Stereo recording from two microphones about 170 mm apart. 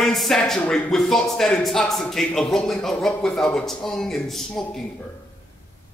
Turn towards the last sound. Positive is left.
turn(degrees=0)  # may be behind; listen again after turning